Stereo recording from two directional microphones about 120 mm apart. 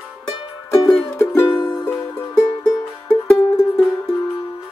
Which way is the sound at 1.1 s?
20° left (ahead or behind).